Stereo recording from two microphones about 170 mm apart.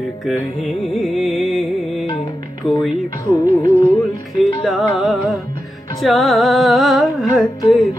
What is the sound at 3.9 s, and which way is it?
Music, centre (ahead or behind).